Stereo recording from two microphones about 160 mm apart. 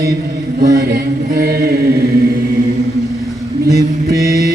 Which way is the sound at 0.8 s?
65° right (ahead or behind).